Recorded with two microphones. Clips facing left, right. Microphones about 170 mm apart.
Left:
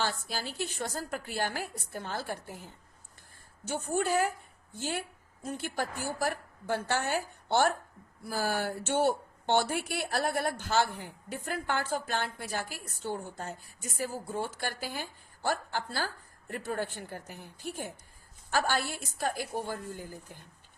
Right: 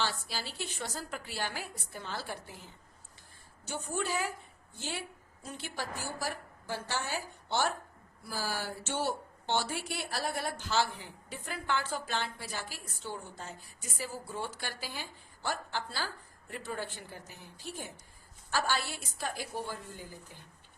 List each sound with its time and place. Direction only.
0.0 s a woman's voice: 50° left (ahead or behind)